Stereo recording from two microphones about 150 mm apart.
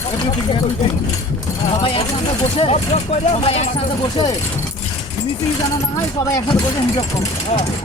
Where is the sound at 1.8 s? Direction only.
40° left (ahead or behind).